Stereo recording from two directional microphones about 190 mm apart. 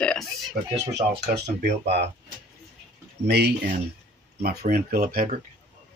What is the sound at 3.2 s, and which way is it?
Speech, 60° right (ahead or behind).